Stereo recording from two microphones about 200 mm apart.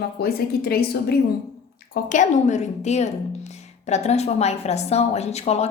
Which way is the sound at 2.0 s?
40° left (ahead or behind).